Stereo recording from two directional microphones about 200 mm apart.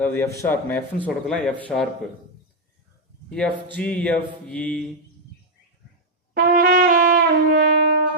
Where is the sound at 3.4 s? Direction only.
5° left (ahead or behind).